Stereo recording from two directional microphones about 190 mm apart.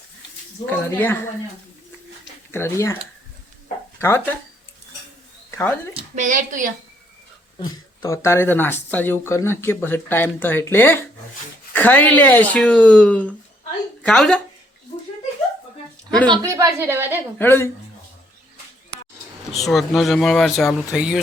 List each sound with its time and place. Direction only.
0.6 s speech: 10° left (ahead or behind)
2.5 s speech: 15° left (ahead or behind)
4.0 s speech: 10° left (ahead or behind)
5.5 s a sound: 10° left (ahead or behind)
6.1 s a woman's voice: 40° right (ahead or behind)
8.0 s speech: 15° left (ahead or behind)
16.5 s a woman's voice: 15° right (ahead or behind)
17.3 s speech: 10° left (ahead or behind)
19.5 s speech: centre (ahead or behind)